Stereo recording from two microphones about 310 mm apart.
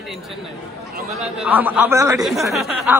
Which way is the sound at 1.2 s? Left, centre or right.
Centre.